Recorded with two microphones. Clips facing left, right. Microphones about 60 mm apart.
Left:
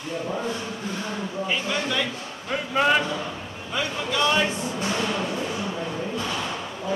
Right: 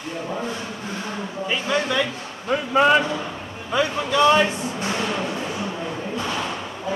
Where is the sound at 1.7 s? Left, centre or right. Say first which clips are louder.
Right 8 dB; right.